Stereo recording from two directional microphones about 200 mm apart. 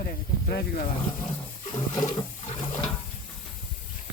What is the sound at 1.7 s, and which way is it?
Toilet flush, 20° left (ahead or behind).